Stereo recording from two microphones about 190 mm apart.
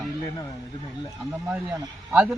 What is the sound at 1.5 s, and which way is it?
Speech, 10° right (ahead or behind).